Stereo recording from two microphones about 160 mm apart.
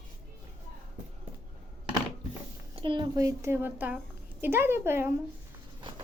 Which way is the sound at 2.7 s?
30° right (ahead or behind).